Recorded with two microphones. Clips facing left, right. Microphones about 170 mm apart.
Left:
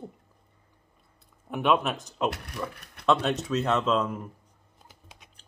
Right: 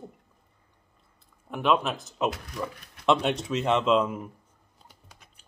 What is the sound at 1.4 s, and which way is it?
Speech, 5° left (ahead or behind).